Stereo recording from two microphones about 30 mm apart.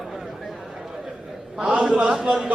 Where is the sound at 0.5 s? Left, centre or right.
Centre.